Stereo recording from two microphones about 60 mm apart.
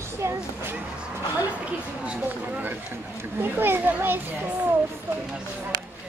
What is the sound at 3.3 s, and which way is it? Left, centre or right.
Speech, right.